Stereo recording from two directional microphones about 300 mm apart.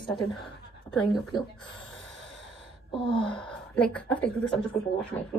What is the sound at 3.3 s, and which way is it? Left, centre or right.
A woman's voice, centre.